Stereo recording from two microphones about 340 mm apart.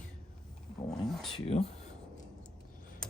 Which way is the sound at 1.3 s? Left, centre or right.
Centre.